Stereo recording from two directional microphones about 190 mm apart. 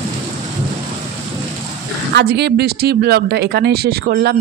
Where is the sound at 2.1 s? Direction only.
60° right (ahead or behind).